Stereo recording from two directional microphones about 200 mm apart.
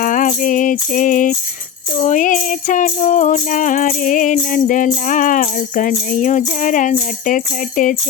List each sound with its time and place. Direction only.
0.0 s music: 40° left (ahead or behind)